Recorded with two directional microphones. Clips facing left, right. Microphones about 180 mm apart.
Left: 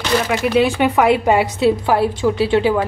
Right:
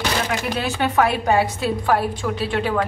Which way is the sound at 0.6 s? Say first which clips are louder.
Left 5 dB; 15° left (ahead or behind).